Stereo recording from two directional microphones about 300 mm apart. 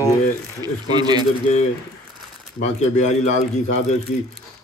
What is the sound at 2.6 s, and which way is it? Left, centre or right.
Speech, left.